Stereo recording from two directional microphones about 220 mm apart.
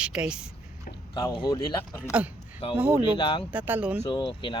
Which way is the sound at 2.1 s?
5° right (ahead or behind).